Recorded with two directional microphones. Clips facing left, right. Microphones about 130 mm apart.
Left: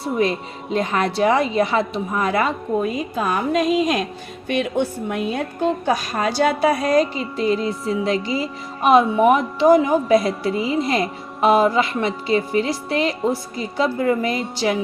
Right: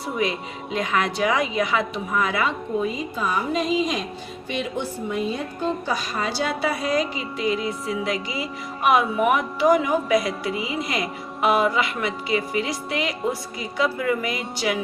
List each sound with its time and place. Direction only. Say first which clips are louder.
0.2 s a woman's voice: left 3 dB; 35° left (ahead or behind)